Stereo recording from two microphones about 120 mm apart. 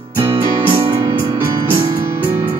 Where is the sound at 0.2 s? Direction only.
50° right (ahead or behind).